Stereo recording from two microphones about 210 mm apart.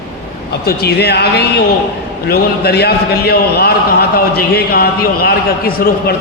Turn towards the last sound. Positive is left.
turn(degrees=45)  # may be behind; listen again after turning